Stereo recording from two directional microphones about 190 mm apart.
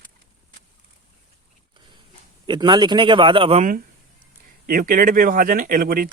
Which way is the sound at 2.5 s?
25° right (ahead or behind).